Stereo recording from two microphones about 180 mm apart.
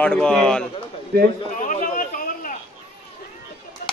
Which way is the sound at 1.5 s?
45° left (ahead or behind).